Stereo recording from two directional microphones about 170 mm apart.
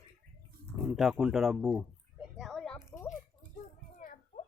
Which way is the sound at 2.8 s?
15° left (ahead or behind).